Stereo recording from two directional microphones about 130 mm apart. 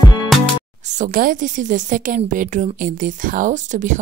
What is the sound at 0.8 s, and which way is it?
A woman's voice, 70° right (ahead or behind).